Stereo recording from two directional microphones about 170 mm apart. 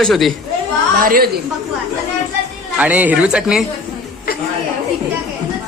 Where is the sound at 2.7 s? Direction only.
10° right (ahead or behind).